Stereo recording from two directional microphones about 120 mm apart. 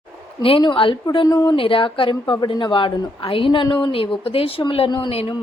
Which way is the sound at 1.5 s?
50° left (ahead or behind).